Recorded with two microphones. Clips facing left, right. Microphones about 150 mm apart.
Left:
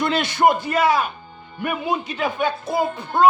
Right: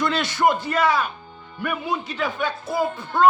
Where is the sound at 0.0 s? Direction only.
15° left (ahead or behind).